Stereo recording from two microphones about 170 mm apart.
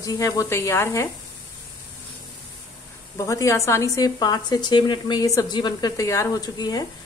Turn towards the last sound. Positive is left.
turn(degrees=20)  # may be behind; listen again after turning